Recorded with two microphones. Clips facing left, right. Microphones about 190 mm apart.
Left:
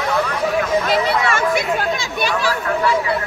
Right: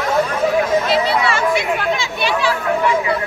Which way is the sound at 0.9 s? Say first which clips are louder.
Right 1 dB; 45° left (ahead or behind).